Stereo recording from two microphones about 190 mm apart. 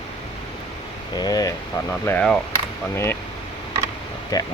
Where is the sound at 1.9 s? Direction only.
10° left (ahead or behind).